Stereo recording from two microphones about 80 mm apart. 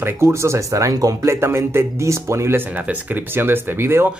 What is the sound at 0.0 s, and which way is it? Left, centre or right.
Speech, right.